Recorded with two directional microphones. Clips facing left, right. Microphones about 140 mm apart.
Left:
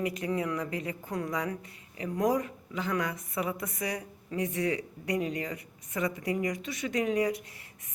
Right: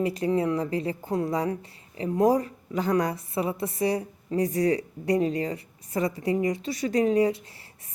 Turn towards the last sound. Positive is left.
turn(degrees=-30)  # may be behind; listen again after turning